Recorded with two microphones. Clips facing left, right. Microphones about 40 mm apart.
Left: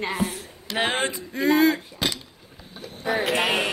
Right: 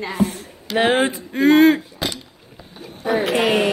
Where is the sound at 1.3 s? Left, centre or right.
Right.